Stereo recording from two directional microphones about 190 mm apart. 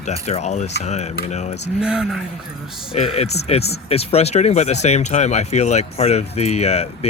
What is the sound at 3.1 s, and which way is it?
Speech, 35° left (ahead or behind).